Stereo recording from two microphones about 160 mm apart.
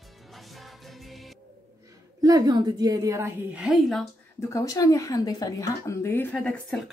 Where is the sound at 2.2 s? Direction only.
25° right (ahead or behind).